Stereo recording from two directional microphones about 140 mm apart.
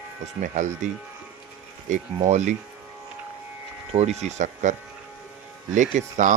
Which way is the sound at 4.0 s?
50° right (ahead or behind).